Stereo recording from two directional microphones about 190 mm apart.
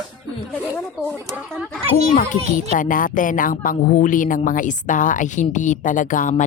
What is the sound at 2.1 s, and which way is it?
A child's voice, 45° left (ahead or behind).